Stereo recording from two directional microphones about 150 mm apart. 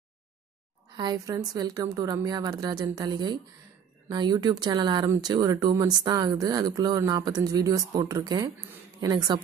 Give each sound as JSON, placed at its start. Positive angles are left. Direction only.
{"t": 0.9, "sound": "speech", "side_deg": -25}